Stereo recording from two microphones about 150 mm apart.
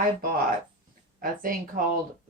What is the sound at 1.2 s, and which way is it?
Speech, 65° right (ahead or behind).